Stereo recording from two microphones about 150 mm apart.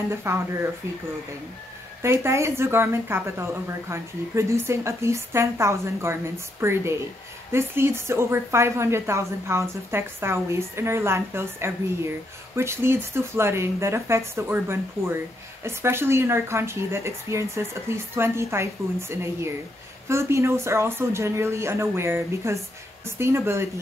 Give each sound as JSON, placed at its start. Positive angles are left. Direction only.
{"t": 0.1, "sound": "a woman's voice", "side_deg": -15}
{"t": 2.0, "sound": "a woman's voice", "side_deg": -15}